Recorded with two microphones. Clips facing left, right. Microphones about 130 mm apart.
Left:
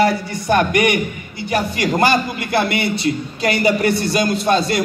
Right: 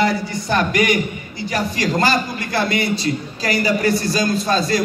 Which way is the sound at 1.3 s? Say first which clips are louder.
Left 2 dB; 25° left (ahead or behind).